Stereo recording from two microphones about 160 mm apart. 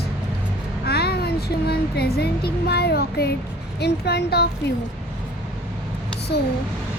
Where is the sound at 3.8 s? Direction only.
90° left.